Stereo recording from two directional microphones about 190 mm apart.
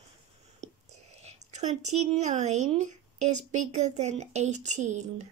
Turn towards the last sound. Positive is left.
turn(degrees=-40)  # may be behind; listen again after turning